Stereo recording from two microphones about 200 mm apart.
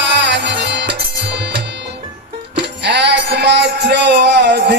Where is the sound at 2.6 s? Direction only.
60° right (ahead or behind).